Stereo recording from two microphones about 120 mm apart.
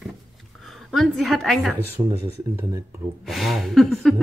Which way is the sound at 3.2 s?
Centre (ahead or behind).